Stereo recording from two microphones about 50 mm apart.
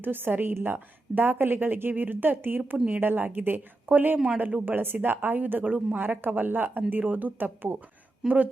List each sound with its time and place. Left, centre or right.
0.0 s a woman's voice: right
8.2 s speech: centre